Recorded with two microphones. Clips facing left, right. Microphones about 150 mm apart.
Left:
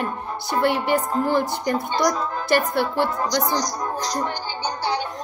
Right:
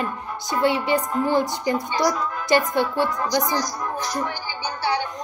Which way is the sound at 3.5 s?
20° left (ahead or behind).